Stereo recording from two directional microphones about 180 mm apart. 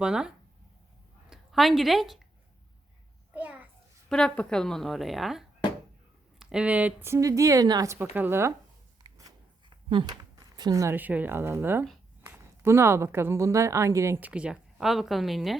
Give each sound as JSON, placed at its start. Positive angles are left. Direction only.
{"t": 0.0, "sound": "a woman's voice", "side_deg": -5}
{"t": 3.3, "sound": "a child's voice", "side_deg": -10}
{"t": 4.1, "sound": "a woman's voice", "side_deg": 5}
{"t": 9.0, "sound": "a sound", "side_deg": -20}
{"t": 12.2, "sound": "speech", "side_deg": -15}